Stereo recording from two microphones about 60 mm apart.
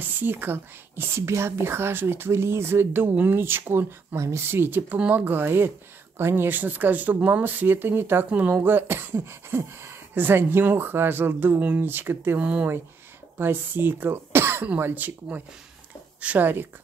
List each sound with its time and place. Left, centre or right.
0.0 s speech: right
8.3 s speech: right
12.4 s speech: centre
13.4 s speech: right